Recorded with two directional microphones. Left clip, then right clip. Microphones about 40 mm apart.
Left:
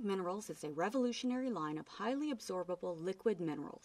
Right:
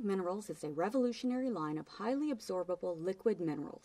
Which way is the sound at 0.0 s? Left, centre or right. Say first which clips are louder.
Right 2 dB; left.